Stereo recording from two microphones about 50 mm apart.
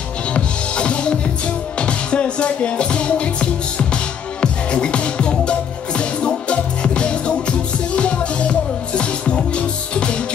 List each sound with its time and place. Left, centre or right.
0.3 s music: left